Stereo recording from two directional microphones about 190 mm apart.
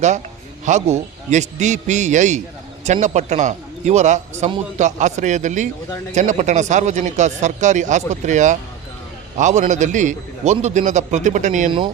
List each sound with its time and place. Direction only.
0.6 s a man's voice: 35° right (ahead or behind)